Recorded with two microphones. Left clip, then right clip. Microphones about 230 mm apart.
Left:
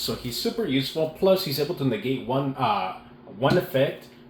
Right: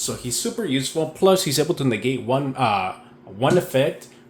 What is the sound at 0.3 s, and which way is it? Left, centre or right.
Speech, right.